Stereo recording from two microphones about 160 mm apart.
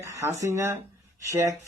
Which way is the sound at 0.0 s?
20° right (ahead or behind).